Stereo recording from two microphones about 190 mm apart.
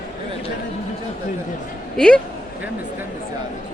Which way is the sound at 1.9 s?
5° left (ahead or behind).